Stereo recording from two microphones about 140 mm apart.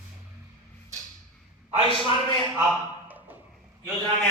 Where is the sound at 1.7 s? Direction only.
40° right (ahead or behind).